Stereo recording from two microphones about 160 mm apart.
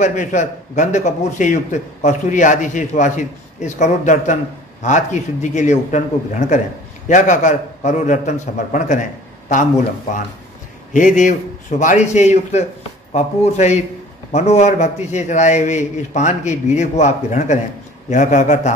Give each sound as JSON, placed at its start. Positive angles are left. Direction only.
{"t": 0.0, "sound": "speech", "side_deg": 50}
{"t": 10.9, "sound": "speech", "side_deg": 55}